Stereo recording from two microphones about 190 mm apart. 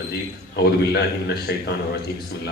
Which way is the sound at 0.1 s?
60° left (ahead or behind).